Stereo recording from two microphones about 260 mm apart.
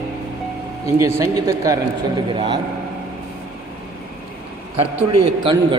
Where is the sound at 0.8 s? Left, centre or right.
Centre.